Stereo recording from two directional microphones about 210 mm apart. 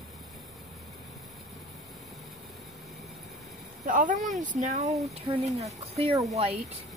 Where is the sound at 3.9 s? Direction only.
40° right (ahead or behind).